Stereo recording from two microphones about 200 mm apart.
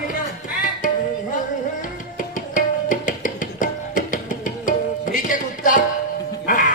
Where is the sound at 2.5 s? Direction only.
40° left (ahead or behind).